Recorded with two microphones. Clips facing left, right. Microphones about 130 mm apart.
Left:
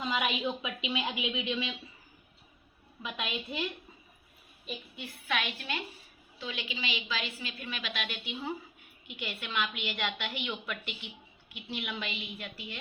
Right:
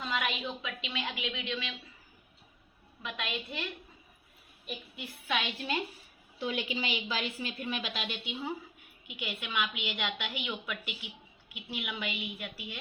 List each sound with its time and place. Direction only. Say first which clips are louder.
0.0 s a woman's voice: left 3 dB; 5° left (ahead or behind)
3.0 s a woman's voice: left 1 dB; 5° left (ahead or behind)
6.4 s a woman's voice: right 5 dB; 45° right (ahead or behind)
7.3 s a woman's voice: right 5 dB; 25° right (ahead or behind); by 12.8 s 10° right (ahead or behind)